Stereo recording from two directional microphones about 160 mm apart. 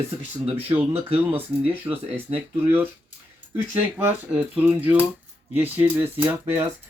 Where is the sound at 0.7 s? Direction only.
10° right (ahead or behind).